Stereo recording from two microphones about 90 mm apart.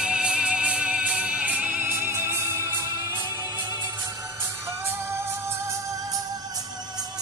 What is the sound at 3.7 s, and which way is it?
Music, 35° right (ahead or behind).